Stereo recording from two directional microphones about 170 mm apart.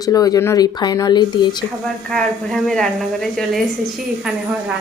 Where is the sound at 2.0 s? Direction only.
Centre (ahead or behind).